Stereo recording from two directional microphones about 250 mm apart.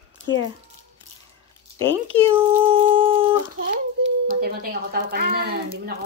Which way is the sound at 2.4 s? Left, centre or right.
Centre.